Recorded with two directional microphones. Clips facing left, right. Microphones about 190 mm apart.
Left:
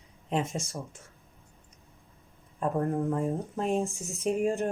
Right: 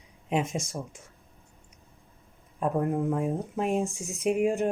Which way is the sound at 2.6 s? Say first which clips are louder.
Right 1 dB; 15° right (ahead or behind).